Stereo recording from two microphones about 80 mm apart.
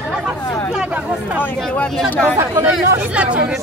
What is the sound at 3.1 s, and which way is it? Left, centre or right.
Speech, centre.